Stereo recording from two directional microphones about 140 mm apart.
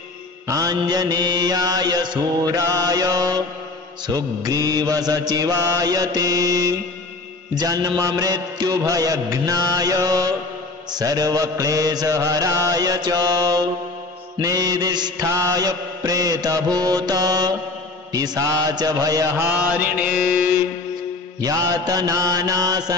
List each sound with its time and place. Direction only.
0.5 s mantra: 25° right (ahead or behind)
19.4 s mantra: 10° right (ahead or behind)
21.4 s mantra: 25° right (ahead or behind)